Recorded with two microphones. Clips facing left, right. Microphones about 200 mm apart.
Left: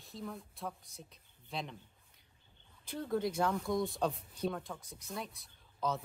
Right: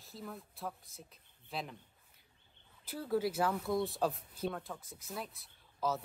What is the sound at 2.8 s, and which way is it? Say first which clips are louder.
Speech: right 1 dB; 5° right (ahead or behind).